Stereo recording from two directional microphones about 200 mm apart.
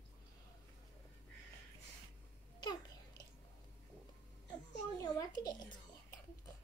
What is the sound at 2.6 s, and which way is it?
Babbling, 20° left (ahead or behind).